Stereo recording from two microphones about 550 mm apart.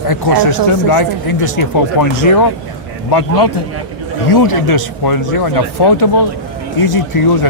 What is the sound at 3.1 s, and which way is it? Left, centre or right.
A man's voice, left.